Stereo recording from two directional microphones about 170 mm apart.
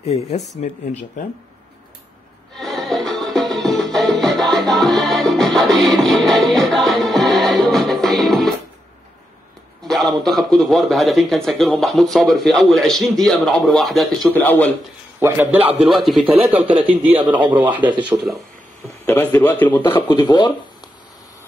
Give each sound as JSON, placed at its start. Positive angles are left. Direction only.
{"t": 0.0, "sound": "speech", "side_deg": 35}
{"t": 2.5, "sound": "music", "side_deg": 0}
{"t": 9.8, "sound": "a man's voice", "side_deg": 0}
{"t": 15.1, "sound": "a man's voice", "side_deg": -10}
{"t": 19.0, "sound": "a man's voice", "side_deg": 10}
{"t": 20.1, "sound": "speech", "side_deg": 25}